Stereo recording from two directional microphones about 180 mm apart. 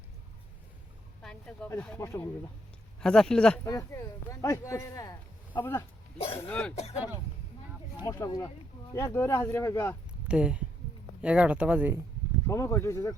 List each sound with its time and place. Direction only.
1.2 s speech: 5° left (ahead or behind)
3.0 s speech: 5° left (ahead or behind)
3.6 s speech: 20° left (ahead or behind)
6.1 s speech: 30° left (ahead or behind)
6.5 s speech: 5° left (ahead or behind)
6.7 s speech: 35° left (ahead or behind)
8.0 s speech: 20° left (ahead or behind)
10.2 s speech: 5° right (ahead or behind)
12.5 s speech: 15° left (ahead or behind)